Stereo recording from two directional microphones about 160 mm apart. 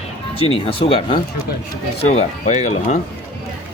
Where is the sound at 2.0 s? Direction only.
45° left (ahead or behind).